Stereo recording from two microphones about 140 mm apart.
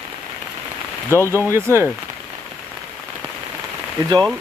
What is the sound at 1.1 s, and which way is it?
Speech, 20° left (ahead or behind).